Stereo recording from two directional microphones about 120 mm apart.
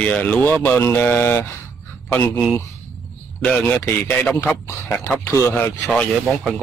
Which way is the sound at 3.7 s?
20° left (ahead or behind).